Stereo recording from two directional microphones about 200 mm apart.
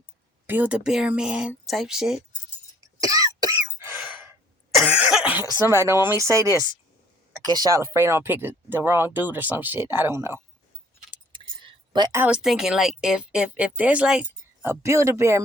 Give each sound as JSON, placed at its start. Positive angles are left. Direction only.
{"t": 0.4, "sound": "speech", "side_deg": -10}
{"t": 3.0, "sound": "cough", "side_deg": -15}
{"t": 5.8, "sound": "speech", "side_deg": -15}
{"t": 11.3, "sound": "a sound", "side_deg": -20}
{"t": 12.2, "sound": "speech", "side_deg": -5}